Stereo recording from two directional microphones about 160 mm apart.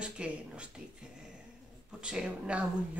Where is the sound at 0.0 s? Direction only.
5° right (ahead or behind).